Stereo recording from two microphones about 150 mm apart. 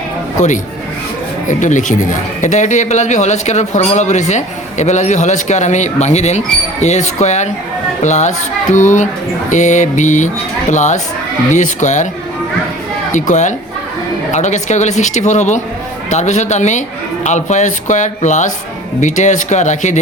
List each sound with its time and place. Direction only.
0.3 s speech: 55° left (ahead or behind)
13.1 s speech: 55° left (ahead or behind)